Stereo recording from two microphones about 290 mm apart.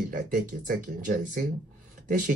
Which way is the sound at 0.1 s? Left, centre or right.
Right.